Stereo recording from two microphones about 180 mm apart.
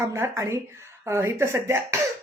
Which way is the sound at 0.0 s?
15° right (ahead or behind).